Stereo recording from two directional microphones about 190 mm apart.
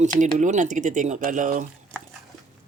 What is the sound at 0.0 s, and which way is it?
Speech, 40° right (ahead or behind).